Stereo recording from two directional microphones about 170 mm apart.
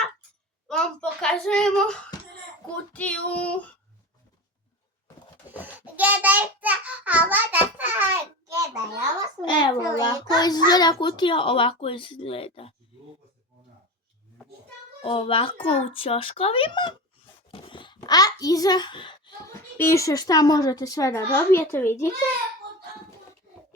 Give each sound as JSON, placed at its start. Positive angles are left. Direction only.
{"t": 0.7, "sound": "a sound", "side_deg": 5}
{"t": 2.7, "sound": "child singing", "side_deg": 10}
{"t": 5.5, "sound": "child singing", "side_deg": -10}
{"t": 9.4, "sound": "a child's voice", "side_deg": 25}
{"t": 15.0, "sound": "a child's voice", "side_deg": 35}
{"t": 19.7, "sound": "a child's voice", "side_deg": 15}